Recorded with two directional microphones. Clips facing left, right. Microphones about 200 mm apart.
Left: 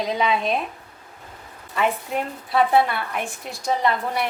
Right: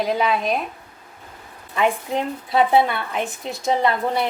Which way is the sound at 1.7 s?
15° right (ahead or behind).